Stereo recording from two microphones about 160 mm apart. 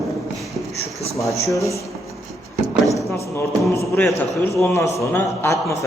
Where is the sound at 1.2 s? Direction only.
20° left (ahead or behind).